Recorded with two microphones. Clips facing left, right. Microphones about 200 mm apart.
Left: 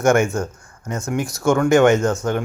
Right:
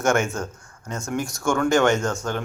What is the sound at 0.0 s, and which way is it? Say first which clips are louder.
Speech: left 5 dB; 15° left (ahead or behind).